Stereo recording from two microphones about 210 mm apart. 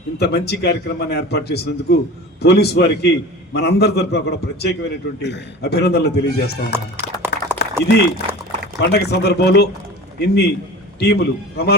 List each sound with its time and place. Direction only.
0.2 s a man's voice: 50° left (ahead or behind)
6.7 s music: 10° right (ahead or behind)
8.8 s a man's voice: 50° left (ahead or behind)